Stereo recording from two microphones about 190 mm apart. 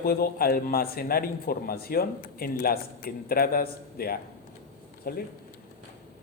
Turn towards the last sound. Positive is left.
turn(degrees=50)  # may be behind; listen again after turning